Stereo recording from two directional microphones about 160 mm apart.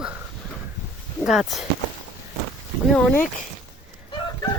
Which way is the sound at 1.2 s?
Centre (ahead or behind).